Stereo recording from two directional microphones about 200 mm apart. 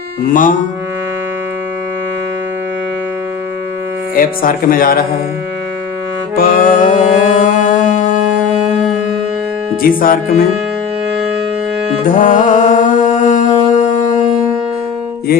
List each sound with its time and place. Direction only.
4.1 s speech: 45° left (ahead or behind)
6.3 s music: 45° left (ahead or behind)
9.8 s speech: 45° left (ahead or behind)
12.0 s music: 40° left (ahead or behind)